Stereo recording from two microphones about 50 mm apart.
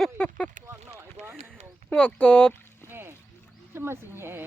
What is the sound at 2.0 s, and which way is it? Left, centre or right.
Speech, left.